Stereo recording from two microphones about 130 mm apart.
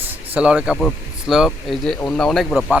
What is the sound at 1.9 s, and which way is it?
Speech, 10° left (ahead or behind).